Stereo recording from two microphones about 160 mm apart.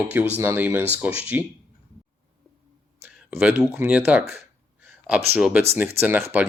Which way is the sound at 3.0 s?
10° right (ahead or behind).